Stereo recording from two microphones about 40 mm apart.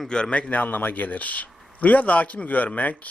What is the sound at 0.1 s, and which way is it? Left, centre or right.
A man's voice, left.